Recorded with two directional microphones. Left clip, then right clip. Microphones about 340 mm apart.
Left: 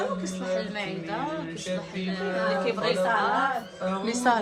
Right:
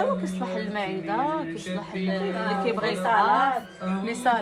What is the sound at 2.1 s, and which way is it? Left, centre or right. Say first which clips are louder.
Speech: left 1 dB; centre.